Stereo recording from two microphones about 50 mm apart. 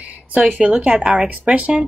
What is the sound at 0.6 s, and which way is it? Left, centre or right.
Speech, right.